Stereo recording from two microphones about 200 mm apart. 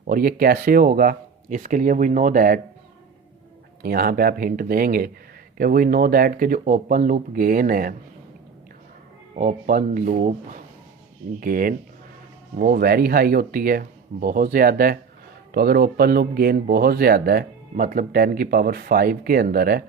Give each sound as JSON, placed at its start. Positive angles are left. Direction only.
{"t": 0.1, "sound": "speech", "side_deg": -45}
{"t": 3.8, "sound": "speech", "side_deg": -50}
{"t": 9.3, "sound": "speech", "side_deg": -40}